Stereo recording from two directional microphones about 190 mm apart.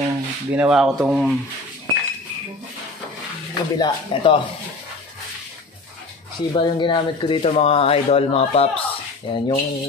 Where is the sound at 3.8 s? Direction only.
25° left (ahead or behind).